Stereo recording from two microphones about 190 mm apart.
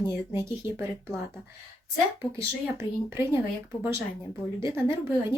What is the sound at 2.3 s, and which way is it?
Speech, 15° right (ahead or behind).